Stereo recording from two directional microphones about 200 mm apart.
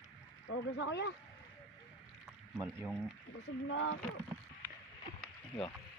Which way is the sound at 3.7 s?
70° left (ahead or behind).